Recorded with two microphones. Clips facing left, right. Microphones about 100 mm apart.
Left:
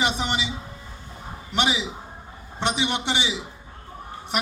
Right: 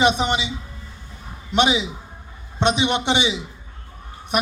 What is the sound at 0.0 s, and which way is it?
Speech, 20° right (ahead or behind).